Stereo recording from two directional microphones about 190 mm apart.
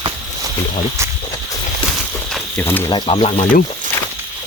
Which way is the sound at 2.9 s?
30° left (ahead or behind).